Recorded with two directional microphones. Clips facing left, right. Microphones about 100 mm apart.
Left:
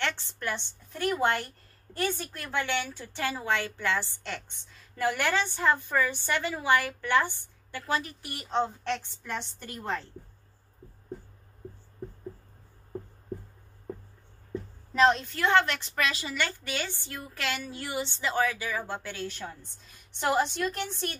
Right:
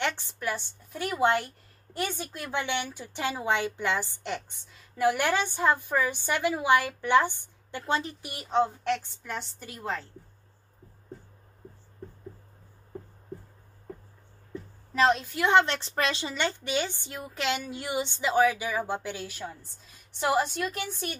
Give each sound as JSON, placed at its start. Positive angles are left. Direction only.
{"t": 0.0, "sound": "a woman's voice", "side_deg": -10}
{"t": 2.0, "sound": "a woman's voice", "side_deg": -15}
{"t": 8.5, "sound": "a woman's voice", "side_deg": -5}
{"t": 15.0, "sound": "a woman's voice", "side_deg": -5}
{"t": 15.4, "sound": "a woman's voice", "side_deg": -25}